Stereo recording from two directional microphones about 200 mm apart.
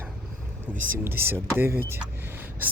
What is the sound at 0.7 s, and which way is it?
Speech, 40° right (ahead or behind).